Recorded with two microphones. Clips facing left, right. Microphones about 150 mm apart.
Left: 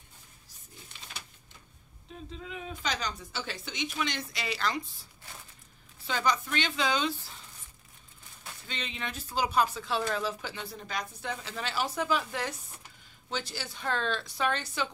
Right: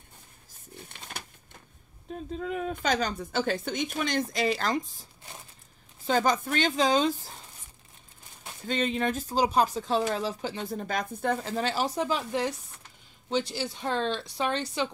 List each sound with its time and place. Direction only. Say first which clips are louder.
0.7 s pigeon: right 5 dB; 55° right (ahead or behind)
2.3 s speech: right 10 dB; 50° right (ahead or behind)
6.0 s speech: right 5 dB; 45° right (ahead or behind)
8.6 s speech: right 12 dB; 45° right (ahead or behind); by 14.9 s 30° right (ahead or behind)